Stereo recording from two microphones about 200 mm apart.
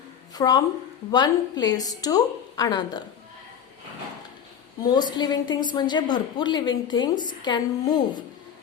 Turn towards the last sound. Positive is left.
turn(degrees=20)  # may be behind; listen again after turning